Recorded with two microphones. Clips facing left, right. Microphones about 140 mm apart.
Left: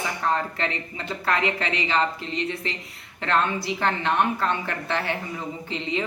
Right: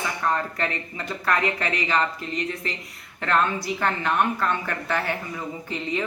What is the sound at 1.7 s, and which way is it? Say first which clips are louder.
A woman's voice: even; 25° left (ahead or behind).